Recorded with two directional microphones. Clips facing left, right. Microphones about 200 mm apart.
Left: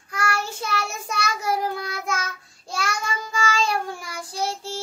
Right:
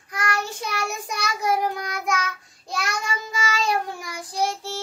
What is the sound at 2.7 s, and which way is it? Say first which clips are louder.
Child singing: even; 20° right (ahead or behind).